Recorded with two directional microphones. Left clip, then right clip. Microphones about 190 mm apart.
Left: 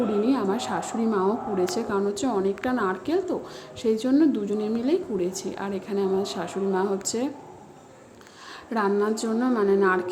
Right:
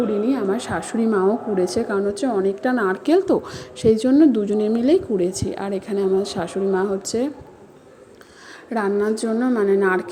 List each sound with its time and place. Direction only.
0.1 s a woman's voice: 10° right (ahead or behind)
8.7 s a woman's voice: 10° right (ahead or behind)